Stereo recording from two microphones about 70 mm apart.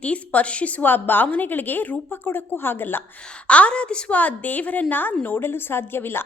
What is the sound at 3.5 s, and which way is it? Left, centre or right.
A woman's voice, centre.